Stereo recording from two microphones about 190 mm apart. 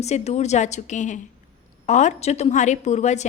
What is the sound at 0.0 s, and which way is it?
A woman's voice, 35° left (ahead or behind).